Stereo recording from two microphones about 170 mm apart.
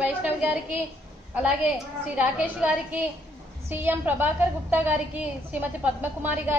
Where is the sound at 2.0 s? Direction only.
10° right (ahead or behind).